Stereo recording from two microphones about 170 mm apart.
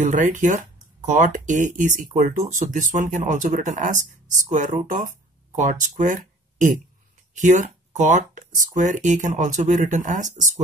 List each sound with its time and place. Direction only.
0.0 s speech: 50° right (ahead or behind)